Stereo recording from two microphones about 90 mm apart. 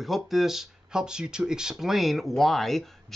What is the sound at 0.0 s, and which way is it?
Speech, centre (ahead or behind).